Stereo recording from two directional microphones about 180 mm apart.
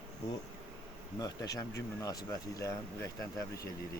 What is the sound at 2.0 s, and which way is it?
Speech, 20° left (ahead or behind).